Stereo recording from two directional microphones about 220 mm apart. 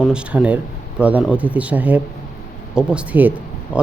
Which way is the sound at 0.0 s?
5° right (ahead or behind).